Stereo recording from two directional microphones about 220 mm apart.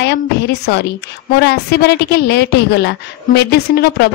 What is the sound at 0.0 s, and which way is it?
A woman's voice, 50° left (ahead or behind).